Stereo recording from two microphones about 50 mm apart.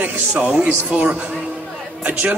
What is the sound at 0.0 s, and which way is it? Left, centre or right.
Speech, right.